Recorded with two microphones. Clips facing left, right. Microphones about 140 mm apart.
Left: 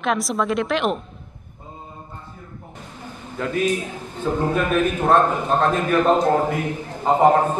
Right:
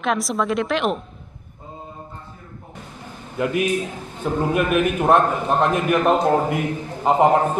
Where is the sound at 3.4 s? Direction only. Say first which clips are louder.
Right 1 dB; 15° right (ahead or behind).